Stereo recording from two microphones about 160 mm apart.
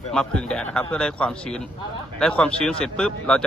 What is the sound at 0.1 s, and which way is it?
Speech, 5° left (ahead or behind).